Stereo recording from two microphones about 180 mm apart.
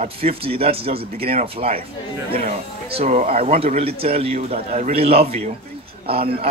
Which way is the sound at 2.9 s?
35° right (ahead or behind).